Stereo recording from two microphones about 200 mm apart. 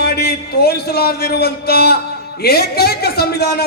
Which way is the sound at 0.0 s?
55° left (ahead or behind).